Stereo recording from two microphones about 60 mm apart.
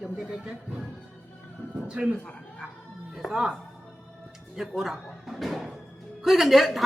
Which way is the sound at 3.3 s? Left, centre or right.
Centre.